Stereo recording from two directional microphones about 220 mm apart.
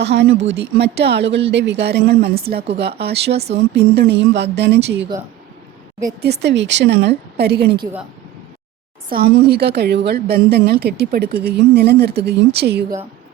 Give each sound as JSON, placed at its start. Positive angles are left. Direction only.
{"t": 0.0, "sound": "a woman's voice", "side_deg": -50}
{"t": 6.2, "sound": "a woman's voice", "side_deg": -50}
{"t": 9.0, "sound": "a woman's voice", "side_deg": -45}